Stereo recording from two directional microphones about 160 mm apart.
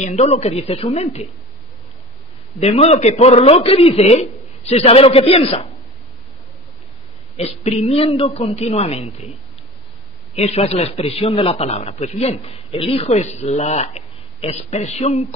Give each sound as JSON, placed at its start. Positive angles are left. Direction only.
{"t": 0.0, "sound": "a man's voice", "side_deg": 45}
{"t": 2.6, "sound": "a man's voice", "side_deg": 40}
{"t": 7.3, "sound": "a man's voice", "side_deg": 40}
{"t": 10.3, "sound": "a man's voice", "side_deg": 40}